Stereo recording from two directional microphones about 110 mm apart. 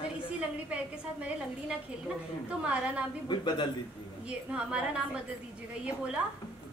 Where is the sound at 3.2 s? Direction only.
45° left (ahead or behind).